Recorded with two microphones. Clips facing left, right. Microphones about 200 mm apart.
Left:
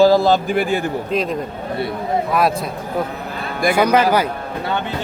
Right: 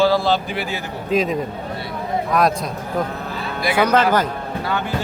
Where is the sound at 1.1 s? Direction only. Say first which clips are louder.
Right 1 dB; centre (ahead or behind).